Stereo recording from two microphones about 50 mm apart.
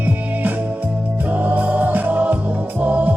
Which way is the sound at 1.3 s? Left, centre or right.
Right.